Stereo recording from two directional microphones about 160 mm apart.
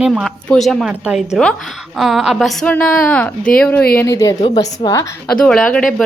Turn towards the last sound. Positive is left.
turn(degrees=5)  # may be behind; listen again after turning